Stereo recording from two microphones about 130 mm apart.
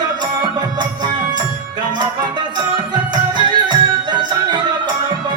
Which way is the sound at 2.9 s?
35° right (ahead or behind).